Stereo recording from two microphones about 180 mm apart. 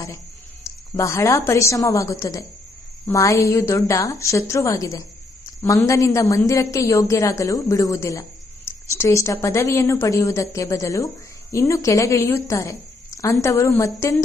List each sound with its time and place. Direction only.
0.6 s a woman's voice: 15° left (ahead or behind)